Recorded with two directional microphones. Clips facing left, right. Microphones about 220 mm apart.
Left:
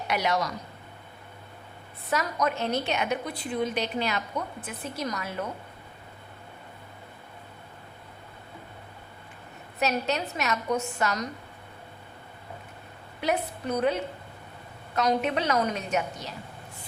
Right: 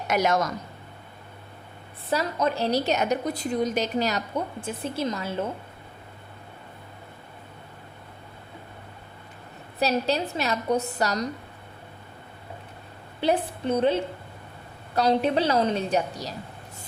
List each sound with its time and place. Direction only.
0.1 s speech: 45° right (ahead or behind)
2.0 s a woman's voice: 30° right (ahead or behind)
9.8 s a woman's voice: 30° right (ahead or behind)
13.2 s a woman's voice: 30° right (ahead or behind)